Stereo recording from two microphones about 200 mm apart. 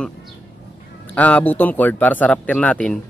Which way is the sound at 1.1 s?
5° left (ahead or behind).